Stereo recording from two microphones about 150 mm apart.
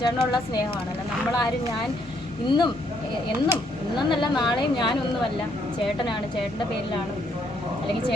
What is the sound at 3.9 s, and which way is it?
Speech, 30° left (ahead or behind).